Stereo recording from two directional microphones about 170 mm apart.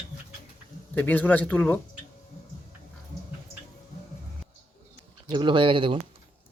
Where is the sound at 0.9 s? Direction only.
10° left (ahead or behind).